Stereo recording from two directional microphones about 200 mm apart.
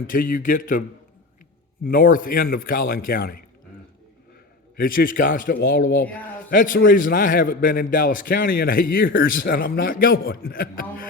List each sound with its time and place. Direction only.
0.1 s a man's voice: 45° left (ahead or behind)
4.8 s a man's voice: 45° left (ahead or behind)